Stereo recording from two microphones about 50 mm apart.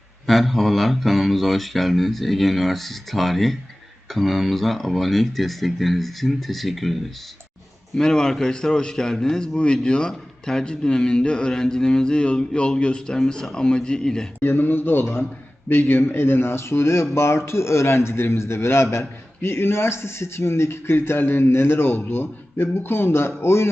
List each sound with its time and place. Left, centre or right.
0.3 s speech: centre
7.9 s a man's voice: centre
14.4 s a man's voice: left